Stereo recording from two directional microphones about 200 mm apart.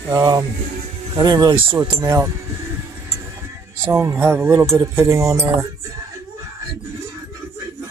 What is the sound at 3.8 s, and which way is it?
Speech, 10° right (ahead or behind).